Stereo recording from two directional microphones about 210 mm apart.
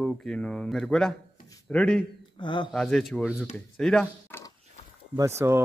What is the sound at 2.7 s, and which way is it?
Speech, centre (ahead or behind).